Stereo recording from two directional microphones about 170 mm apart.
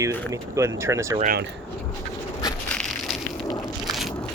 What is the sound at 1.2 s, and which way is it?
Speech, 65° right (ahead or behind).